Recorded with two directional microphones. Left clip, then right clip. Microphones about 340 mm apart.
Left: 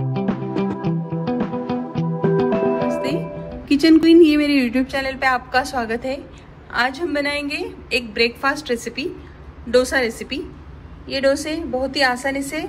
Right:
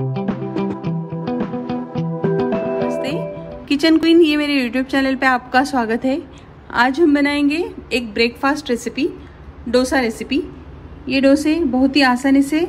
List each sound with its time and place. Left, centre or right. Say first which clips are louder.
0.1 s music: even; centre
2.9 s music: even; right
3.6 s a woman's voice: left 1 dB; right